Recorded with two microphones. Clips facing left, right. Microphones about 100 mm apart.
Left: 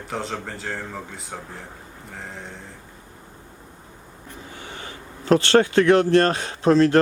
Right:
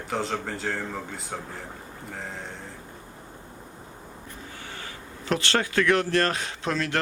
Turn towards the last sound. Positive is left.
turn(degrees=35)  # may be behind; listen again after turning